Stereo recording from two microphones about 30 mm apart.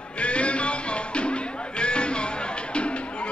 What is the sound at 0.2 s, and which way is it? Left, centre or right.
Music, left.